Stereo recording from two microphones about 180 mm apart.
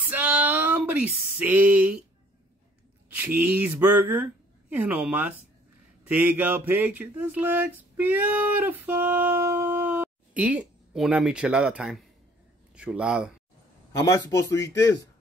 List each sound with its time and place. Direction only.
0.0 s a sound: 10° right (ahead or behind)
3.3 s speech: 10° right (ahead or behind)
13.9 s speech: 15° left (ahead or behind)